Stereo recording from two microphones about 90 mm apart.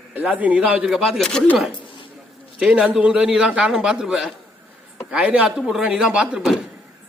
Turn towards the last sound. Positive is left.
turn(degrees=-10)  # may be behind; listen again after turning